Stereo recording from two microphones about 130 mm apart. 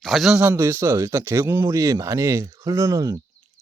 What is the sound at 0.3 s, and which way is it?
Speech, 20° right (ahead or behind).